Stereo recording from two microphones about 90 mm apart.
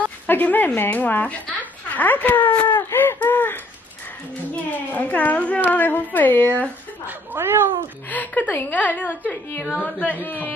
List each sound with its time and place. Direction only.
0.3 s speech: 20° left (ahead or behind)
2.9 s a sound: 25° left (ahead or behind)
4.7 s a woman's voice: 15° left (ahead or behind)
7.1 s speech: 25° right (ahead or behind)
8.1 s a woman's voice: 20° left (ahead or behind)